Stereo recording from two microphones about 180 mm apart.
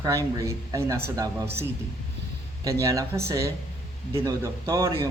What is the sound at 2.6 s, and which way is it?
Speech, 15° right (ahead or behind).